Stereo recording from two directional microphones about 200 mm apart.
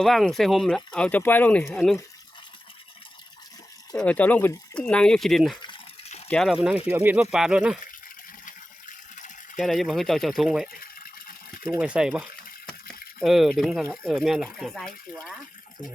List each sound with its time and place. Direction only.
0.0 s speech: centre (ahead or behind)
3.9 s speech: 5° left (ahead or behind)
5.6 s a sound: 25° left (ahead or behind)
6.2 s speech: 5° left (ahead or behind)
8.4 s water: 40° left (ahead or behind)
9.6 s speech: centre (ahead or behind)
10.8 s water: 45° left (ahead or behind)
11.8 s speech: 5° right (ahead or behind)